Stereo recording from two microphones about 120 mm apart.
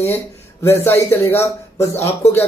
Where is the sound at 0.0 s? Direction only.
20° left (ahead or behind).